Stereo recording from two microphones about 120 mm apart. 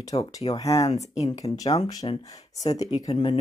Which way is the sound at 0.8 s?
65° left (ahead or behind).